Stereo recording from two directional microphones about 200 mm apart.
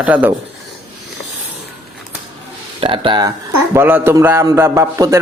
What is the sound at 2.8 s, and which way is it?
Speech, 25° right (ahead or behind).